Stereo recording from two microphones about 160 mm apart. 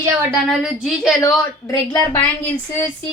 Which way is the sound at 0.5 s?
Centre (ahead or behind).